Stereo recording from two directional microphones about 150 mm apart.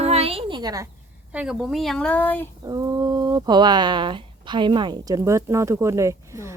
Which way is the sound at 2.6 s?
25° right (ahead or behind).